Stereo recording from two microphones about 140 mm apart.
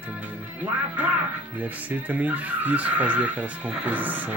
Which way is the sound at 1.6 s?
10° right (ahead or behind).